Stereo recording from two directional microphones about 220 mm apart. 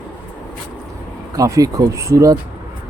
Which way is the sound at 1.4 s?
15° right (ahead or behind).